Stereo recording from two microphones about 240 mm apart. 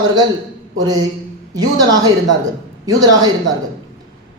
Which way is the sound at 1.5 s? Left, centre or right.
Centre.